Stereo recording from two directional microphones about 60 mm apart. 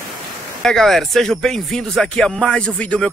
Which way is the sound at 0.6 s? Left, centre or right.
Centre.